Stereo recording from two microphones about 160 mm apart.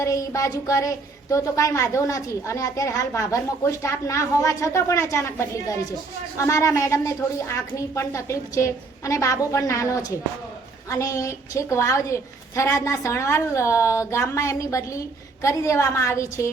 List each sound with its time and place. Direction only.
0.0 s a woman's voice: 20° left (ahead or behind)